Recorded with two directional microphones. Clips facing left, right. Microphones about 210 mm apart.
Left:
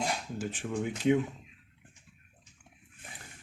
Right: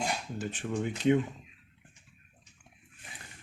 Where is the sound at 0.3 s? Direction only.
5° left (ahead or behind).